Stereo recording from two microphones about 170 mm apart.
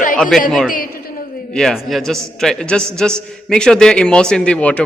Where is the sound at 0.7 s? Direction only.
60° left (ahead or behind).